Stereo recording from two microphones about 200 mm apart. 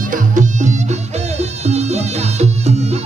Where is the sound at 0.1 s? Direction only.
40° right (ahead or behind).